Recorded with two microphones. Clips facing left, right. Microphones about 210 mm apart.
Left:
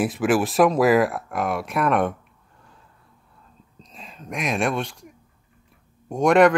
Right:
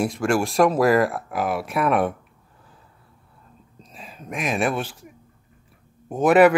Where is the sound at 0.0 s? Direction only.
5° left (ahead or behind).